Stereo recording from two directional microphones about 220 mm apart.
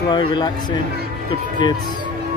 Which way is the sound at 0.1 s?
20° left (ahead or behind).